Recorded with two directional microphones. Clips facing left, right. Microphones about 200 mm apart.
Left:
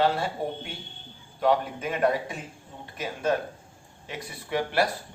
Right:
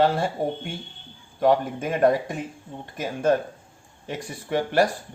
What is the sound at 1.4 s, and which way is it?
Speech, 45° right (ahead or behind).